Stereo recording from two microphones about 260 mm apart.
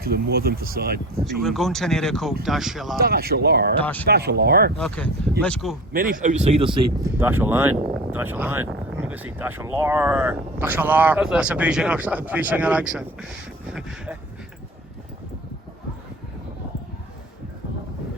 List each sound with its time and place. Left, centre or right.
0.0 s speech: right
1.2 s speech: centre
3.0 s speech: right
3.8 s speech: centre
4.1 s speech: right
4.8 s speech: centre
5.9 s speech: right
7.2 s speech: centre